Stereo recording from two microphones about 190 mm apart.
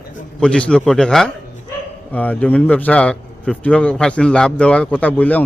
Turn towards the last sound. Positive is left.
turn(degrees=10)  # may be behind; listen again after turning